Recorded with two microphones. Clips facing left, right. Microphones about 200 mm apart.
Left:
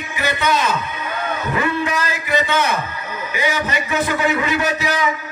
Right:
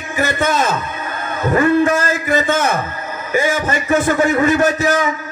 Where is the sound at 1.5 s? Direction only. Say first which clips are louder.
Right 9 dB; 45° right (ahead or behind).